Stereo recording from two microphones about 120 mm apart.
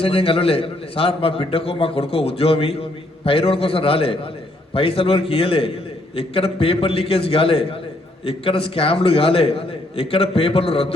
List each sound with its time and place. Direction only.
0.0 s a man's voice: 50° left (ahead or behind)